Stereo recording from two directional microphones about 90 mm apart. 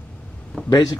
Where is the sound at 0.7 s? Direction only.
50° left (ahead or behind).